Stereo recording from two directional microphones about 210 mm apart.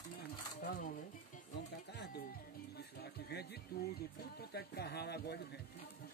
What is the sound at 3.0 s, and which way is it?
Speech, 50° left (ahead or behind).